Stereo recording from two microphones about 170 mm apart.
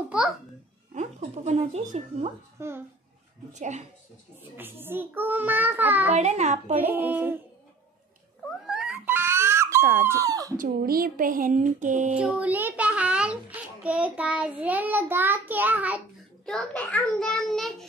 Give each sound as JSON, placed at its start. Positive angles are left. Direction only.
{"t": 0.9, "sound": "speech", "side_deg": -40}
{"t": 2.6, "sound": "a child's voice", "side_deg": -15}
{"t": 3.5, "sound": "speech", "side_deg": -45}
{"t": 4.4, "sound": "a child's voice", "side_deg": -10}
{"t": 6.1, "sound": "a child's voice", "side_deg": -40}
{"t": 6.9, "sound": "a child's voice", "side_deg": -10}
{"t": 8.6, "sound": "dog", "side_deg": -5}
{"t": 10.6, "sound": "speech", "side_deg": -60}
{"t": 12.1, "sound": "a child's voice", "side_deg": -5}
{"t": 16.4, "sound": "a child's voice", "side_deg": 5}